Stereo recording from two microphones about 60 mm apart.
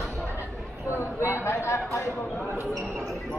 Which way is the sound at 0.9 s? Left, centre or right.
Left.